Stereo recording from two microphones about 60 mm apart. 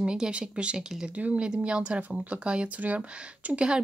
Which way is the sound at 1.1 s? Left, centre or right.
Right.